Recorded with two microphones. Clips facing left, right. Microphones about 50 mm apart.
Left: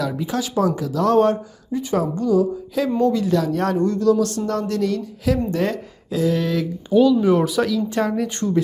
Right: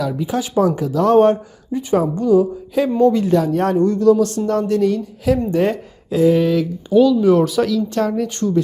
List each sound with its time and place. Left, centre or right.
0.3 s speech: right
3.0 s speech: right
6.1 s a sound: right
6.3 s speech: centre
6.9 s speech: left
7.4 s a woman's voice: centre